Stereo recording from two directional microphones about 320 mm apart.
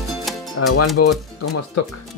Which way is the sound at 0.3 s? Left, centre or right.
Centre.